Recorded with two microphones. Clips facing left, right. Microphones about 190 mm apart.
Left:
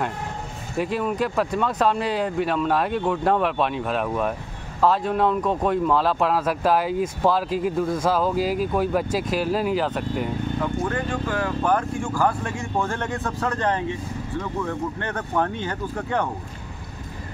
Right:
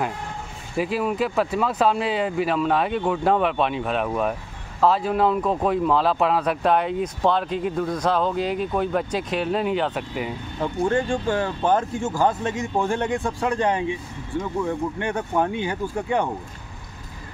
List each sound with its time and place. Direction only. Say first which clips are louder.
0.7 s speech: right 1 dB; centre (ahead or behind)
10.6 s speech: right 7 dB; 30° right (ahead or behind)